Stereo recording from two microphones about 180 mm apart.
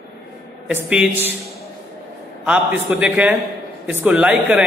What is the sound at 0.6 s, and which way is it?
Speech, 5° right (ahead or behind).